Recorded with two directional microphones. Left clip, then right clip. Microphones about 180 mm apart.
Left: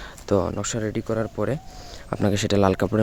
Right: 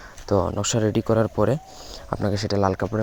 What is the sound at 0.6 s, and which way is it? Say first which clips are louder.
Speech: right 5 dB; 10° right (ahead or behind).